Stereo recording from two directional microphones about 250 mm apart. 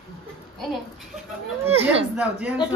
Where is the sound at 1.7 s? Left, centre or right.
Right.